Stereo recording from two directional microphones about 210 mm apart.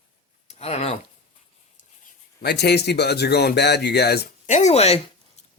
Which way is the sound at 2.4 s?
50° left (ahead or behind).